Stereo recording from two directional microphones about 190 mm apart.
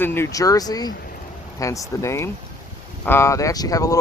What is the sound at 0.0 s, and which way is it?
Speech, 10° left (ahead or behind).